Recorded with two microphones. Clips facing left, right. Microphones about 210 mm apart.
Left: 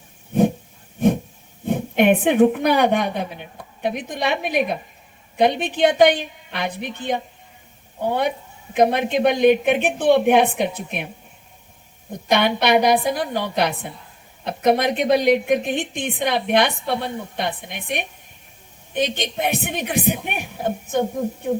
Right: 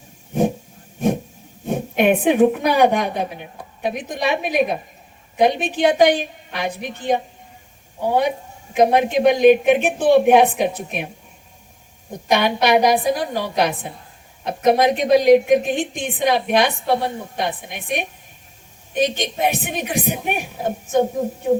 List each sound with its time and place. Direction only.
1.6 s speech: 60° left (ahead or behind)
3.2 s a woman's voice: 50° right (ahead or behind)
3.8 s a woman's voice: 60° left (ahead or behind)
12.3 s a woman's voice: 60° left (ahead or behind)